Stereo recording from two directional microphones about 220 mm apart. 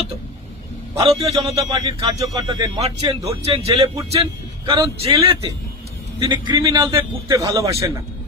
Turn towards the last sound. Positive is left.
turn(degrees=-15)  # may be behind; listen again after turning